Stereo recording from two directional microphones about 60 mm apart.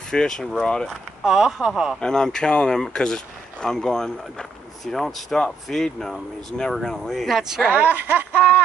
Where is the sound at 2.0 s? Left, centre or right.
Centre.